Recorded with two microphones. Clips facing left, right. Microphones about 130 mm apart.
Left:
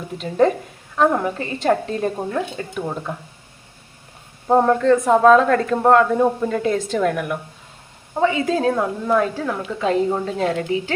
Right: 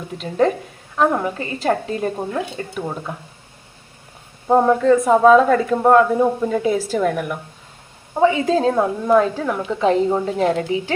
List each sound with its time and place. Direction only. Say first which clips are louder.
0.2 s speech: left 1 dB; centre (ahead or behind)
4.4 s speech: right 1 dB; centre (ahead or behind)
8.1 s a woman's voice: right 3 dB; 20° right (ahead or behind)